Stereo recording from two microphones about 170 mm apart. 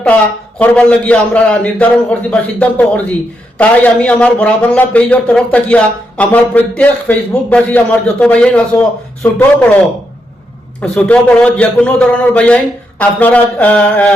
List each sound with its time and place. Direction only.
0.6 s speech: 5° left (ahead or behind)
10.8 s speech: 5° left (ahead or behind)